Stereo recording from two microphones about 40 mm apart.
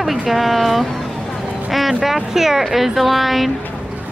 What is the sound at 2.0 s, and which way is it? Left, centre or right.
A woman's voice, centre.